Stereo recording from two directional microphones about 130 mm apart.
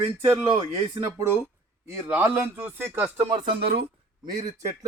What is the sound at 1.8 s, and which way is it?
A man's voice, 20° right (ahead or behind).